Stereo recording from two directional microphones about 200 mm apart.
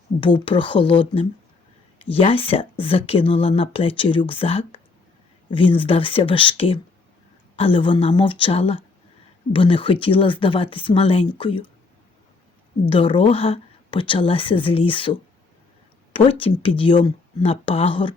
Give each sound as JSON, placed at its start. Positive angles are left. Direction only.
{"t": 0.2, "sound": "speech", "side_deg": 25}
{"t": 12.9, "sound": "speech", "side_deg": 25}